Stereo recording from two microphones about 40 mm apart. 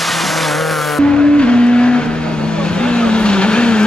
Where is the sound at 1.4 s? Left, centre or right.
Left.